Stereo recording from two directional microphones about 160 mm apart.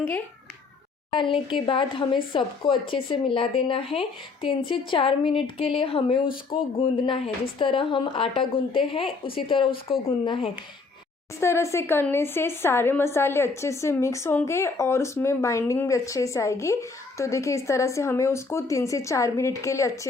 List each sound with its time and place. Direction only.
1.1 s speech: 30° left (ahead or behind)
11.3 s speech: 20° left (ahead or behind)